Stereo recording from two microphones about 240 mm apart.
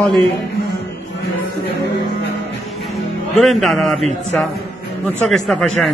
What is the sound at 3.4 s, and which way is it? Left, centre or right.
Speech, centre.